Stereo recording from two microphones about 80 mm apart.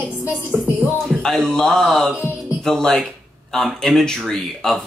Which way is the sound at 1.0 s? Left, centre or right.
Centre.